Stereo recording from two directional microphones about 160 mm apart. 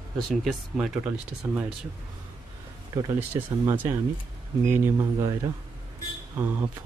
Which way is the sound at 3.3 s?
15° right (ahead or behind).